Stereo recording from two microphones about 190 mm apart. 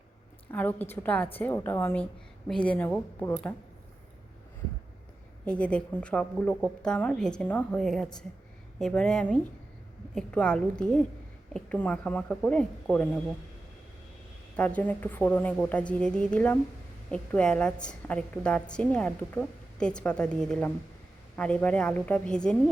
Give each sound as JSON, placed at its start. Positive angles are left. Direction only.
{"t": 0.5, "sound": "a woman's voice", "side_deg": 10}
{"t": 5.5, "sound": "a woman's voice", "side_deg": 5}
{"t": 14.5, "sound": "a woman's voice", "side_deg": 5}